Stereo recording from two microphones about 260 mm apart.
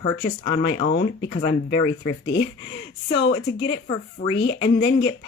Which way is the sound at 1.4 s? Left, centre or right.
Centre.